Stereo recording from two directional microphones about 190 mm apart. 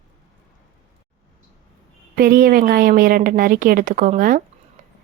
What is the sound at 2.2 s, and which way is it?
A woman's voice, 50° right (ahead or behind).